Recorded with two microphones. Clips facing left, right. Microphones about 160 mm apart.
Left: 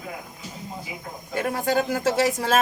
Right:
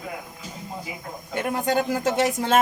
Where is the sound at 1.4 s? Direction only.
20° right (ahead or behind).